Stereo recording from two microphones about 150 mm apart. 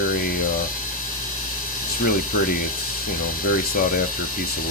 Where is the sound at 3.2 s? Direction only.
70° left (ahead or behind).